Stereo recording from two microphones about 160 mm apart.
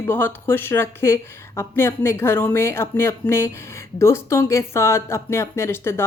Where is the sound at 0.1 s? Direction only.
15° left (ahead or behind).